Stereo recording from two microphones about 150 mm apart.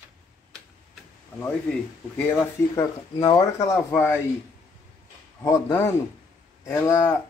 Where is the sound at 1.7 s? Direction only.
15° left (ahead or behind).